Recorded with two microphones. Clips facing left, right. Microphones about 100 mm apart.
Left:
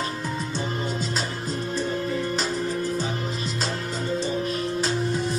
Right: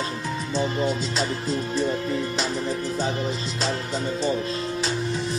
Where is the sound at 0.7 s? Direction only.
40° left (ahead or behind).